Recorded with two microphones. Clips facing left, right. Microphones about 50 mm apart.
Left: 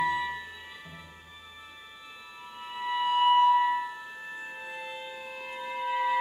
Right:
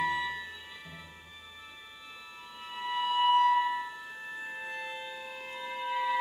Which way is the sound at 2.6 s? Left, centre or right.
Centre.